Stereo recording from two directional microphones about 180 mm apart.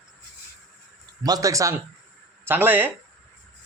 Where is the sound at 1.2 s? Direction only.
20° right (ahead or behind).